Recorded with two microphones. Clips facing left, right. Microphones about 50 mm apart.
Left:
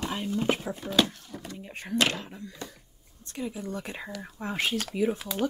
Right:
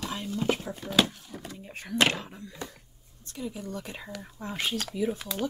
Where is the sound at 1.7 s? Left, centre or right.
Left.